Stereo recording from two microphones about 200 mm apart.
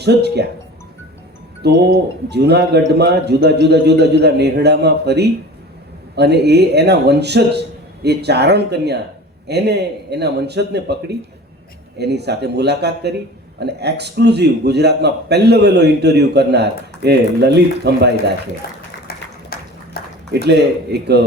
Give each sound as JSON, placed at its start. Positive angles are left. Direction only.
{"t": 0.0, "sound": "a man's voice", "side_deg": -55}
{"t": 1.6, "sound": "a man's voice", "side_deg": -55}
{"t": 19.0, "sound": "a sound", "side_deg": 50}
{"t": 20.3, "sound": "a man's voice", "side_deg": -55}